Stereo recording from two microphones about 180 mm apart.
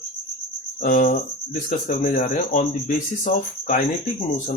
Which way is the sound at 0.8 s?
45° left (ahead or behind).